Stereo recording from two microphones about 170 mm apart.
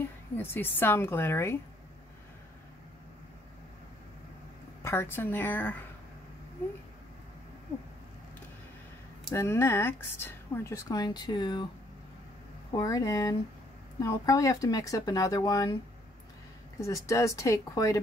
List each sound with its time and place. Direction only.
0.4 s a woman's voice: 10° left (ahead or behind)
4.8 s a woman's voice: 15° left (ahead or behind)
9.3 s a woman's voice: 15° left (ahead or behind)
12.7 s speech: 20° left (ahead or behind)
16.8 s speech: 20° left (ahead or behind)